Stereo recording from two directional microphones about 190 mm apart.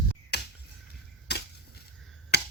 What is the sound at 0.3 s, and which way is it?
Finger snapping, 60° left (ahead or behind).